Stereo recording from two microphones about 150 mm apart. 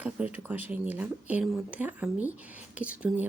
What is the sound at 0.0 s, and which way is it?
Speech, 10° right (ahead or behind).